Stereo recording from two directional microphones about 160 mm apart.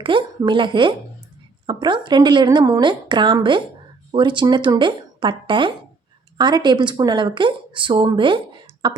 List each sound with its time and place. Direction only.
0.0 s speech: 30° right (ahead or behind)